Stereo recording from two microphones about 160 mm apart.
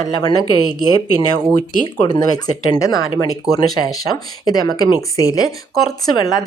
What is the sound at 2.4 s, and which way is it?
A woman's voice, 25° left (ahead or behind).